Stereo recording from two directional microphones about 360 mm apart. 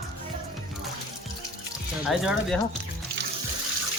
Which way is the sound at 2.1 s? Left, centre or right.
Centre.